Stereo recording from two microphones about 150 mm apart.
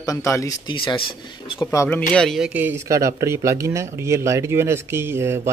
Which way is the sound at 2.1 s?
5° left (ahead or behind).